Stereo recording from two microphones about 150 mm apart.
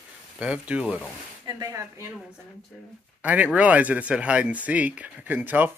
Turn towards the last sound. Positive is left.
turn(degrees=-10)  # may be behind; listen again after turning